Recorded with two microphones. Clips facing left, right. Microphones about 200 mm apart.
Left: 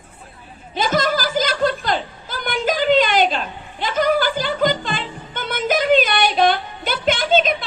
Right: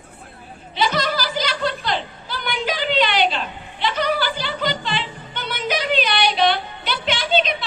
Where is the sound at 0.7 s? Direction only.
45° left (ahead or behind).